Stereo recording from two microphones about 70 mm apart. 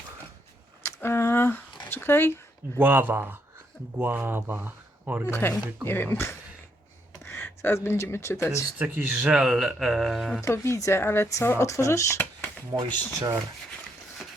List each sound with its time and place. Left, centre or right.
0.9 s a sound: left
1.9 s speech: left
2.7 s speech: right
5.3 s speech: left
9.3 s speech: centre
10.4 s speech: left
12.7 s speech: right